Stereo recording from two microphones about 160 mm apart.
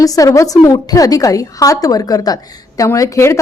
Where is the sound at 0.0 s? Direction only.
20° left (ahead or behind).